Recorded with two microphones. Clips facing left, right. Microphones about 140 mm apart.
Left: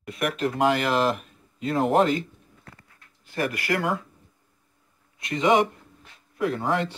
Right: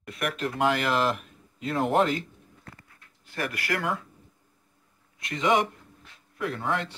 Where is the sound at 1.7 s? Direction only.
Centre (ahead or behind).